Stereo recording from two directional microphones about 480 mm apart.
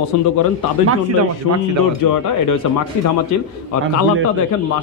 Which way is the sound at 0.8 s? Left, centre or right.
Right.